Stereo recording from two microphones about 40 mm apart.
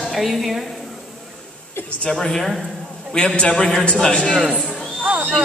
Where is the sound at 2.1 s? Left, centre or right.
Centre.